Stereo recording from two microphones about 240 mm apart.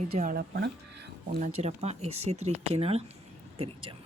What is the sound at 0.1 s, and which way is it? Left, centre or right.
Speech, right.